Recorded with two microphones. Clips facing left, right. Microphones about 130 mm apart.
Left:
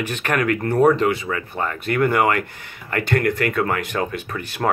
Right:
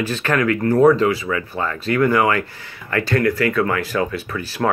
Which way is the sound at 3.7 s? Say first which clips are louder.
Right 3 dB; 20° left (ahead or behind).